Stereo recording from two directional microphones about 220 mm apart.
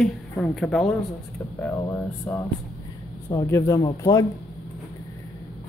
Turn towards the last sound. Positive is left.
turn(degrees=15)  # may be behind; listen again after turning